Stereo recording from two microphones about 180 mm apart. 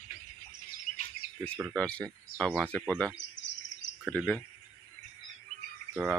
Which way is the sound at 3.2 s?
85° left.